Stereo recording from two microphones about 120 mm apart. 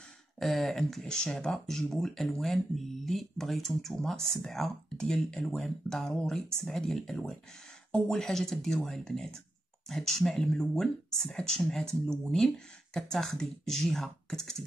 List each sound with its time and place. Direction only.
0.4 s speech: centre (ahead or behind)